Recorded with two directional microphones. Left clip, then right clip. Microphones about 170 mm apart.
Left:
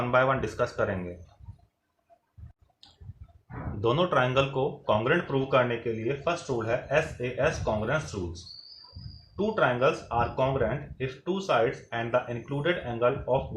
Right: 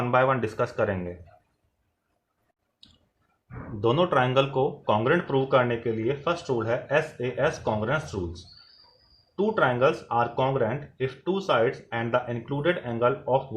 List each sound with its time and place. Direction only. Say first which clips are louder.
0.1 s speech: right 2 dB; 40° right (ahead or behind)
3.8 s speech: right 2 dB; 40° right (ahead or behind)